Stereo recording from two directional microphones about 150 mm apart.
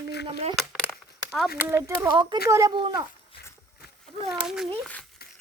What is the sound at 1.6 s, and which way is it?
Speech, 20° right (ahead or behind).